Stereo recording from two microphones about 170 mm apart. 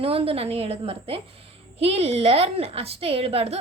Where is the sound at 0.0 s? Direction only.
35° right (ahead or behind).